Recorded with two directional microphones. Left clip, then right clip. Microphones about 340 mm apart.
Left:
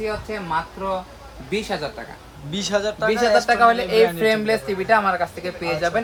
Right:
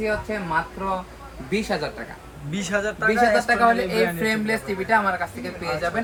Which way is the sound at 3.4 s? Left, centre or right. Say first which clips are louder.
Left 3 dB; centre.